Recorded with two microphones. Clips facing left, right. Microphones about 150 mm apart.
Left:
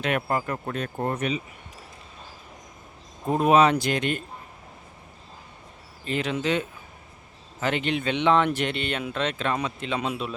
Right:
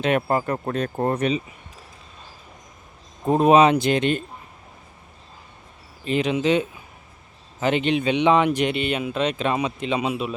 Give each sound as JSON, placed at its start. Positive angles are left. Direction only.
{"t": 0.0, "sound": "speech", "side_deg": -30}
{"t": 3.2, "sound": "speech", "side_deg": -30}
{"t": 6.1, "sound": "speech", "side_deg": -20}